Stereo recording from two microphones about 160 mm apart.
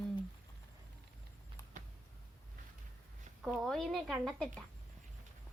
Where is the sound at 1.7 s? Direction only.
55° right (ahead or behind).